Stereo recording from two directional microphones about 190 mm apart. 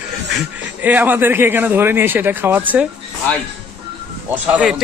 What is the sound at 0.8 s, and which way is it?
A man's voice, 10° right (ahead or behind).